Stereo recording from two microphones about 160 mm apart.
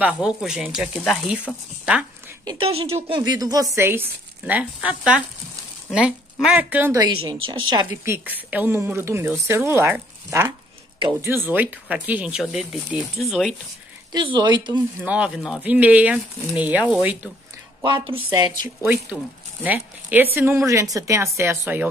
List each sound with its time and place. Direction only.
0.0 s speech: 5° right (ahead or behind)
2.4 s a woman's voice: 35° right (ahead or behind); by 6.9 s 10° right (ahead or behind)
7.2 s speech: 35° right (ahead or behind); by 13.5 s centre (ahead or behind)
14.1 s a woman's voice: 30° right (ahead or behind)
15.0 s speech: 5° right (ahead or behind)
17.8 s a woman's voice: 30° right (ahead or behind)
19.6 s speech: 10° right (ahead or behind)